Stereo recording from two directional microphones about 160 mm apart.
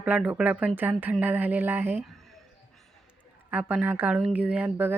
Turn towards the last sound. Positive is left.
turn(degrees=-10)  # may be behind; listen again after turning